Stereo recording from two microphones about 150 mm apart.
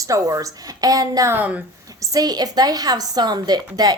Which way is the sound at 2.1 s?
25° right (ahead or behind).